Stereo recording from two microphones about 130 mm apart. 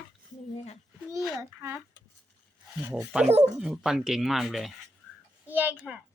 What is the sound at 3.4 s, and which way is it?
Speech, 5° right (ahead or behind).